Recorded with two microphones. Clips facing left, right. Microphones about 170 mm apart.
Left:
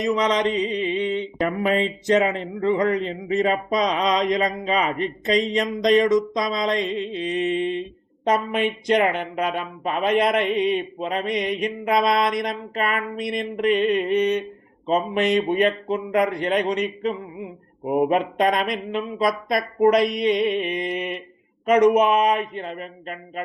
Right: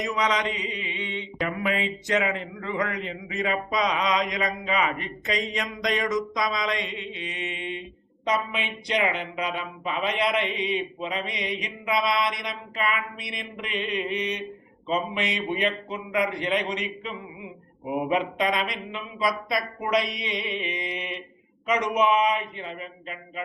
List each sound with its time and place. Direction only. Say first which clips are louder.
0.3 s mantra: left 6 dB; 40° left (ahead or behind)
8.2 s speech: left 6 dB; 50° left (ahead or behind)